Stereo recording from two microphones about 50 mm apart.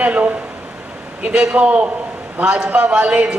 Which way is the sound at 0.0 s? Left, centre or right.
Right.